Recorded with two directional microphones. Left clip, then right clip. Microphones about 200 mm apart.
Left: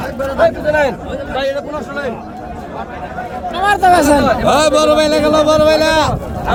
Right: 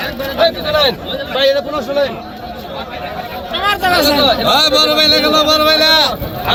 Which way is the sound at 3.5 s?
45° left (ahead or behind).